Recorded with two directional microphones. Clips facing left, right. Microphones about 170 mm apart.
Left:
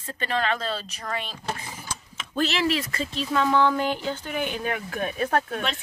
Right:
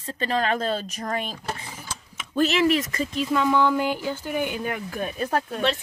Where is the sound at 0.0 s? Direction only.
35° right (ahead or behind).